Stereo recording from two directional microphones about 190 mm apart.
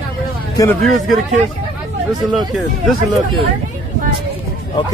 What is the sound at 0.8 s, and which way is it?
Speech, centre (ahead or behind).